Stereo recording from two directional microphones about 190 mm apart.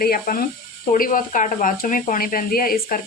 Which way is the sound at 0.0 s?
50° left (ahead or behind).